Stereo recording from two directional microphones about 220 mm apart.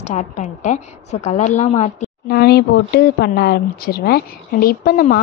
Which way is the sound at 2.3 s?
45° left (ahead or behind).